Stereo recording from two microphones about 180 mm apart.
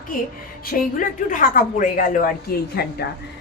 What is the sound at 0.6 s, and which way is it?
Speech, 50° left (ahead or behind).